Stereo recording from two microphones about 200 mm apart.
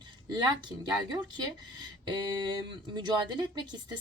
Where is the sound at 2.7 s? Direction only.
20° right (ahead or behind).